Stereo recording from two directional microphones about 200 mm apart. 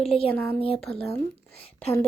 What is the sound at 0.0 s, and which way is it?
Speech, 30° left (ahead or behind).